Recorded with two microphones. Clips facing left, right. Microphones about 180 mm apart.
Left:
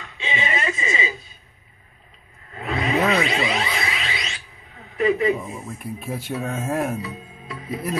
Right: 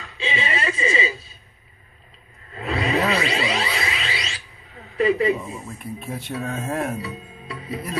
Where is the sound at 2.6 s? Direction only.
35° right (ahead or behind).